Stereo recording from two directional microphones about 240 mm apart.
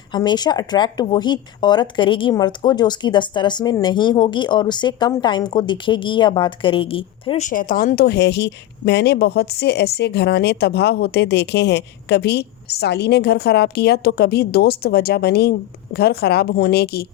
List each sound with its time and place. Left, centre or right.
0.1 s speech: centre; by 17.1 s left